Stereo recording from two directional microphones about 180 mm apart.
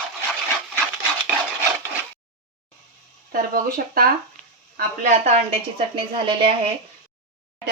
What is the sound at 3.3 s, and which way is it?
Speech, 50° right (ahead or behind).